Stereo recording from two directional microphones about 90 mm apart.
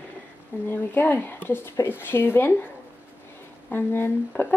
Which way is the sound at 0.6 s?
25° left (ahead or behind).